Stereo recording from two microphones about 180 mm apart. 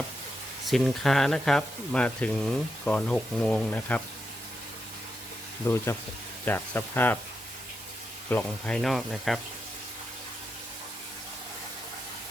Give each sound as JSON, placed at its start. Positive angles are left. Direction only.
{"t": 0.6, "sound": "speech", "side_deg": 0}
{"t": 5.6, "sound": "speech", "side_deg": 15}
{"t": 8.3, "sound": "speech", "side_deg": 10}